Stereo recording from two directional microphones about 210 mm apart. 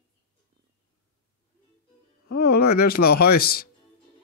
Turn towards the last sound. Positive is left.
turn(degrees=45)  # may be behind; listen again after turning